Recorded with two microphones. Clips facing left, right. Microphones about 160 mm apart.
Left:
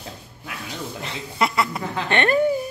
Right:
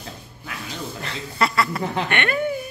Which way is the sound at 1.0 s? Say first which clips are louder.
Even; 20° left (ahead or behind).